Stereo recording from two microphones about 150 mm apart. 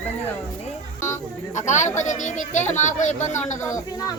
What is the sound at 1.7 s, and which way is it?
Speech, 55° left (ahead or behind).